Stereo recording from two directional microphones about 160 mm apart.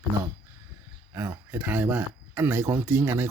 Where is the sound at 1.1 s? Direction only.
15° right (ahead or behind).